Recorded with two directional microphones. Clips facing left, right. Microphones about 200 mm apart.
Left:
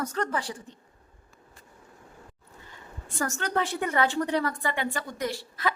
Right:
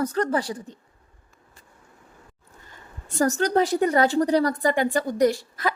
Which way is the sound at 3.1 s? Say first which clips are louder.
Right 8 dB; 35° right (ahead or behind).